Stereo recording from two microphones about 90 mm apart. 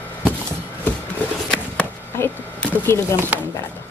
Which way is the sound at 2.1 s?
20° left (ahead or behind).